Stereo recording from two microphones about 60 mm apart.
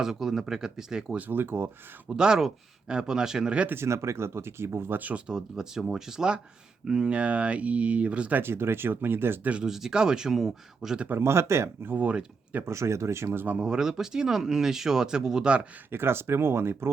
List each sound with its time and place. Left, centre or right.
0.0 s speech: centre
1.3 s speech: right
2.0 s speech: centre
3.7 s speech: right
8.4 s speech: right
9.4 s speech: right
9.6 s speech: centre
11.1 s speech: right
12.0 s speech: right
12.6 s speech: right
13.3 s speech: right
13.6 s speech: centre
15.9 s speech: right